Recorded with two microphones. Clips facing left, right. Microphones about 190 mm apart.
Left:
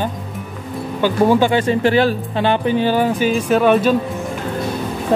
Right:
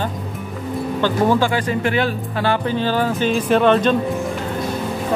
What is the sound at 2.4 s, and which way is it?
Speech, 20° left (ahead or behind).